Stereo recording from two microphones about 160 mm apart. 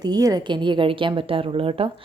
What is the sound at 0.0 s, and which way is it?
A woman's voice, 25° right (ahead or behind).